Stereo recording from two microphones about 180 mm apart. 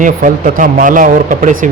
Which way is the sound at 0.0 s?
45° right (ahead or behind).